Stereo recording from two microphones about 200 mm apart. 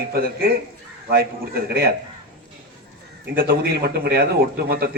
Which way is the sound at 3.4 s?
50° right (ahead or behind).